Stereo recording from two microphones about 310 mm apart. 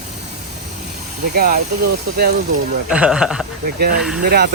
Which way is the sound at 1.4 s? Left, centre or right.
Right.